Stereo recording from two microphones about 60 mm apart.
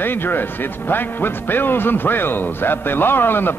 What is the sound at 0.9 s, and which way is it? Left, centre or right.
A man's voice, left.